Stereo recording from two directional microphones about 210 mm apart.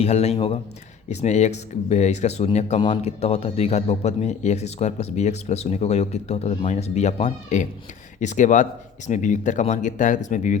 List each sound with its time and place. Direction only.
0.0 s a man's voice: 30° left (ahead or behind)